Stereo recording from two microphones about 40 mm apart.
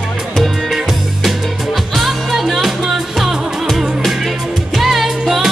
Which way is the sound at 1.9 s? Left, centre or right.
Centre.